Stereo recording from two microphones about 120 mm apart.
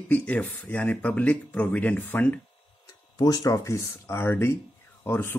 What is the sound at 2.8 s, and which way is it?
A man's voice, 30° left (ahead or behind).